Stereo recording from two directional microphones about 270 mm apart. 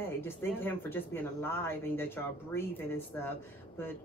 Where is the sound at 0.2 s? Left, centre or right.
Centre.